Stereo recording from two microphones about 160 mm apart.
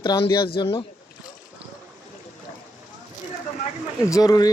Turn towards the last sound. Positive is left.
turn(degrees=20)  # may be behind; listen again after turning